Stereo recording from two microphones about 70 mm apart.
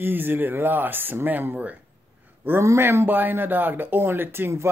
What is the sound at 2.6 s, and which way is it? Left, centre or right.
A woman's voice, right.